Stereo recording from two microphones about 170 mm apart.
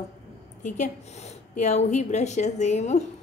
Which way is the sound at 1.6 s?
45° left (ahead or behind).